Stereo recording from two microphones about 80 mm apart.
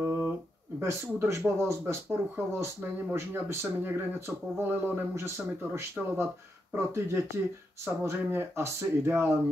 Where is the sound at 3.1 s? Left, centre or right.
Right.